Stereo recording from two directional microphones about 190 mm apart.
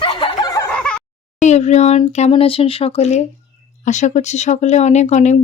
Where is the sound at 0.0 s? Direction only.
25° left (ahead or behind).